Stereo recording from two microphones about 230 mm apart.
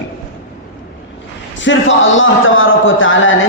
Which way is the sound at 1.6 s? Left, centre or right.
Left.